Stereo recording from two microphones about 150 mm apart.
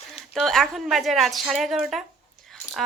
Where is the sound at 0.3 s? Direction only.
Centre (ahead or behind).